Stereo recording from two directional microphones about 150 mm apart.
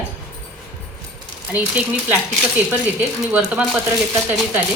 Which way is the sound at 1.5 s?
10° right (ahead or behind).